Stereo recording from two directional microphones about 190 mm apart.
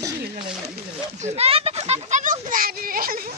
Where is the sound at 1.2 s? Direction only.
35° right (ahead or behind).